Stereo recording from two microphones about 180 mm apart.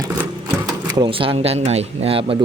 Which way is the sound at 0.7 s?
25° right (ahead or behind).